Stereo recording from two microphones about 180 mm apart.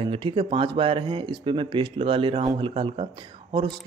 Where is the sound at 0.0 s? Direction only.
30° right (ahead or behind).